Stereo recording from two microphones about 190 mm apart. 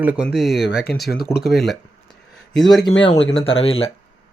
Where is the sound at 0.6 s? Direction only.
60° left (ahead or behind).